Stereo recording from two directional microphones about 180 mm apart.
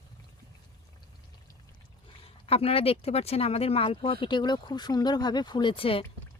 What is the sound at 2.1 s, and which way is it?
Speech, 30° left (ahead or behind).